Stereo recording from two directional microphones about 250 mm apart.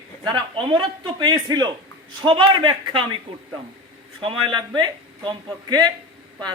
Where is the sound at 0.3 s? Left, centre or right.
Centre.